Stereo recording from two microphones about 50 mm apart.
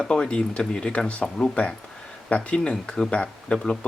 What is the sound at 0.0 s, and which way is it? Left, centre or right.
Speech, centre.